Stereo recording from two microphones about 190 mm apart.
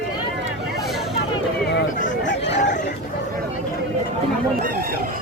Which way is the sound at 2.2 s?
65° left (ahead or behind).